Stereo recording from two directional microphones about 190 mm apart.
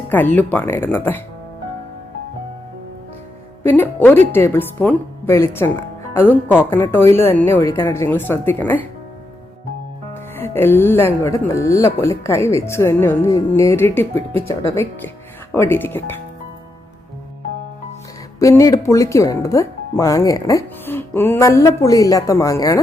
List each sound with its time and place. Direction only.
0.1 s speech: 10° left (ahead or behind)
3.6 s speech: 10° left (ahead or behind)
10.4 s speech: 10° left (ahead or behind)
18.3 s speech: 15° left (ahead or behind)